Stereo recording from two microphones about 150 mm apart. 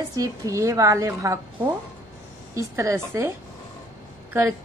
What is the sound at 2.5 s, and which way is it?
A woman's voice, 20° right (ahead or behind).